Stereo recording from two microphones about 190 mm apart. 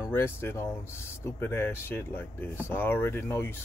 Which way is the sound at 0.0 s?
15° left (ahead or behind).